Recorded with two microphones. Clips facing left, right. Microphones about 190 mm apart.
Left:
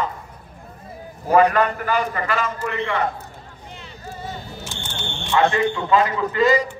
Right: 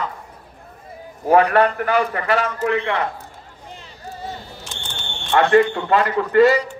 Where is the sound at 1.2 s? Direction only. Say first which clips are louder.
Right 2 dB; 65° right (ahead or behind).